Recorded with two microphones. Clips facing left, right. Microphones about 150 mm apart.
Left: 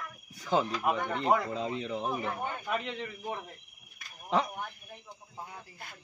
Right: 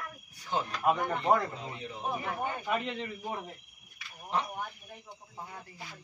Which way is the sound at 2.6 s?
Centre (ahead or behind).